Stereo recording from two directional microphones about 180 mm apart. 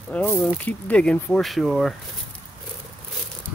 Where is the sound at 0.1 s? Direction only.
5° left (ahead or behind).